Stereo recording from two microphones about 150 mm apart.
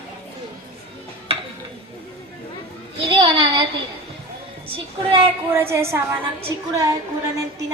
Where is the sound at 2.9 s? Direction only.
35° right (ahead or behind).